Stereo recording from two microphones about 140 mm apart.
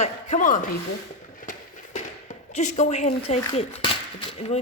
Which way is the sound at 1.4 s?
65° left (ahead or behind).